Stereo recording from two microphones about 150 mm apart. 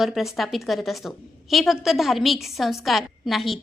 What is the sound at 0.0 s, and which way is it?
A woman's voice, centre (ahead or behind).